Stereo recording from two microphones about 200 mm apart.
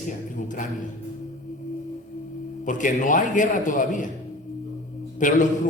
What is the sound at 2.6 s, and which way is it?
A man's voice, 40° left (ahead or behind).